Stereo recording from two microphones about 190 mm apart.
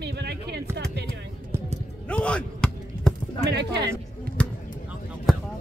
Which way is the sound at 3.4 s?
60° right (ahead or behind).